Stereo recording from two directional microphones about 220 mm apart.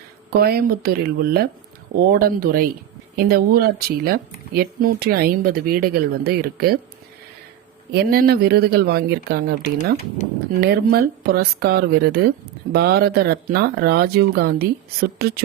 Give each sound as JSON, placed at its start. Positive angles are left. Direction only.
{"t": 0.3, "sound": "speech", "side_deg": -45}
{"t": 7.9, "sound": "speech", "side_deg": -45}